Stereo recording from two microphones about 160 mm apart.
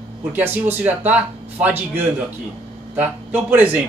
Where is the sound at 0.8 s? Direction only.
10° right (ahead or behind).